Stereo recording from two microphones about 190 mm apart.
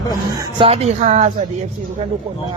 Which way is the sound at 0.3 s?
30° right (ahead or behind).